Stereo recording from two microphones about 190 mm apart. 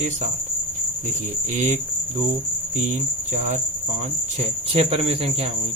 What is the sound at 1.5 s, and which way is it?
Speech, 40° right (ahead or behind).